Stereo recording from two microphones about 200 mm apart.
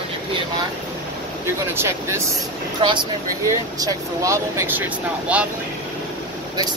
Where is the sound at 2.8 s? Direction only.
25° right (ahead or behind); by 5.5 s 5° right (ahead or behind).